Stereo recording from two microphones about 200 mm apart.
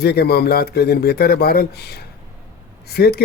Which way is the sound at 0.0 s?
50° left (ahead or behind).